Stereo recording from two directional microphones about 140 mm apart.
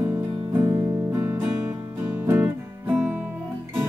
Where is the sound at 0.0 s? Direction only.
10° right (ahead or behind).